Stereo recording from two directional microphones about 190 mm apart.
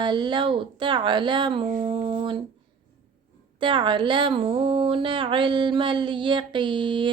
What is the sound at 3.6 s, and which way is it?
Speech, 25° right (ahead or behind).